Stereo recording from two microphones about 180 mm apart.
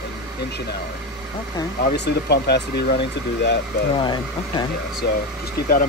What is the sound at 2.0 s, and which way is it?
Speech, 65° left (ahead or behind).